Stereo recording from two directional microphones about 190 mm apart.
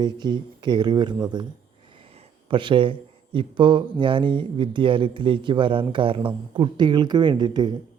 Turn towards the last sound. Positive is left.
turn(degrees=-25)  # may be behind; listen again after turning